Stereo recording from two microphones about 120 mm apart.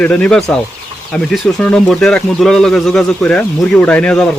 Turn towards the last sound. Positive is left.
turn(degrees=10)  # may be behind; listen again after turning